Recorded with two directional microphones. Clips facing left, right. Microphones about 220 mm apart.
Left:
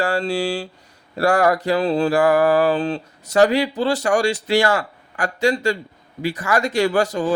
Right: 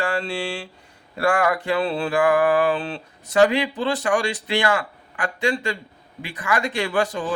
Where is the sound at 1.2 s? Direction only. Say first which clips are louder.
Left 4 dB; 40° left (ahead or behind).